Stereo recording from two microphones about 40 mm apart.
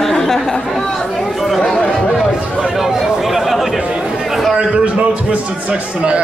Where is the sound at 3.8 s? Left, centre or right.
Right.